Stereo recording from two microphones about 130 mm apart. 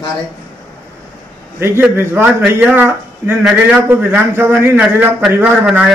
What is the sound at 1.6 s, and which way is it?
A man's voice, 15° right (ahead or behind).